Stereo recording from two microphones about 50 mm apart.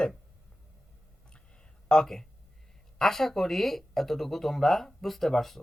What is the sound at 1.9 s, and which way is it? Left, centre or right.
Speech, centre.